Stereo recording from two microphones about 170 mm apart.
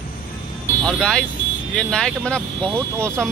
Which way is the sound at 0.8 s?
5° left (ahead or behind).